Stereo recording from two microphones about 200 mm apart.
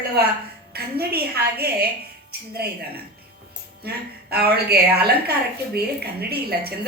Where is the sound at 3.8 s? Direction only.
50° right (ahead or behind).